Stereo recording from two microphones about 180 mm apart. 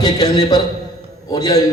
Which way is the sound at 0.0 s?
20° left (ahead or behind).